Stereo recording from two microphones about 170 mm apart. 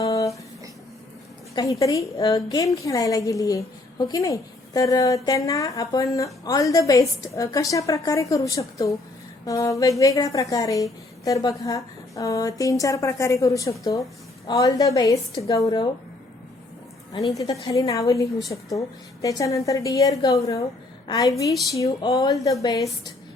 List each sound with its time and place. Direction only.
0.0 s a sound: 20° left (ahead or behind)
1.5 s a woman's voice: 20° left (ahead or behind)
17.3 s a woman's voice: 20° left (ahead or behind)